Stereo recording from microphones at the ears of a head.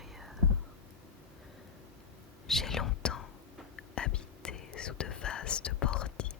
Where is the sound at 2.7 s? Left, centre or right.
Left.